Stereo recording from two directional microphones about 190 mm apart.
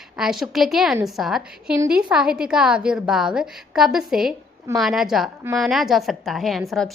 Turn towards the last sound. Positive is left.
turn(degrees=0)  # may be behind; listen again after turning